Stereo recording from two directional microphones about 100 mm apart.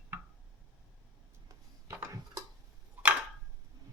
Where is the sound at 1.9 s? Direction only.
30° right (ahead or behind).